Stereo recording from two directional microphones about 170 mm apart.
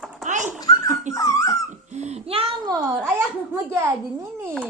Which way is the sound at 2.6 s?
20° right (ahead or behind).